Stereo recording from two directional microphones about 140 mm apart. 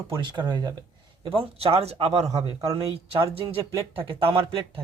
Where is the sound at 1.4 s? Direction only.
45° right (ahead or behind).